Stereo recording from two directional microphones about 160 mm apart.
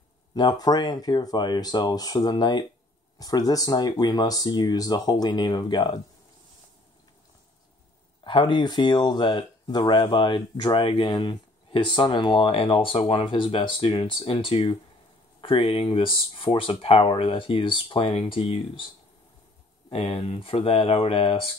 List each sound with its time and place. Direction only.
0.3 s speech: 25° left (ahead or behind)
8.2 s speech: 30° left (ahead or behind)
19.9 s speech: 40° left (ahead or behind)